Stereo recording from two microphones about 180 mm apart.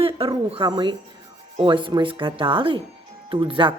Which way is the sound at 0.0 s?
30° right (ahead or behind).